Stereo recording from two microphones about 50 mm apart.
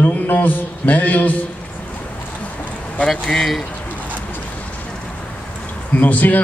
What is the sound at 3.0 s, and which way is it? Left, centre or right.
Speech, centre.